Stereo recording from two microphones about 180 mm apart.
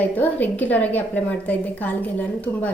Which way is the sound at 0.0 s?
10° left (ahead or behind).